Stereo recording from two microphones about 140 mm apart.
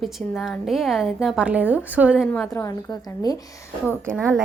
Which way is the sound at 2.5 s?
25° left (ahead or behind).